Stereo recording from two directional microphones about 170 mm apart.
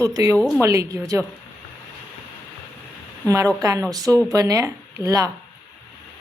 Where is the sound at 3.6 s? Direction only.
20° right (ahead or behind).